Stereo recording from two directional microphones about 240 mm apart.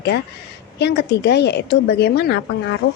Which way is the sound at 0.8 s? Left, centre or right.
Left.